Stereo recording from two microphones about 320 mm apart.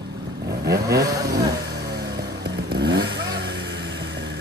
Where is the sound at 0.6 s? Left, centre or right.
Right.